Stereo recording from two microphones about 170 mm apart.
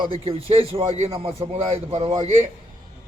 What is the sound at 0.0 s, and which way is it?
A man's voice, 35° right (ahead or behind).